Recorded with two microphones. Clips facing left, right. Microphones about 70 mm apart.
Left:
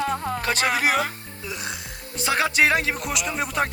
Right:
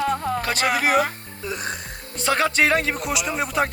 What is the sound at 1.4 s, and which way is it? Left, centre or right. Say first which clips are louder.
Speech: right 4 dB; right.